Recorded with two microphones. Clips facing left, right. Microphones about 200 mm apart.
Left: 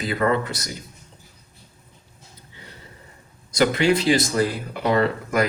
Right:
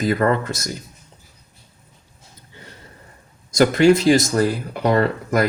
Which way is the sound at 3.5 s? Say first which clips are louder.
Right 5 dB; 45° right (ahead or behind).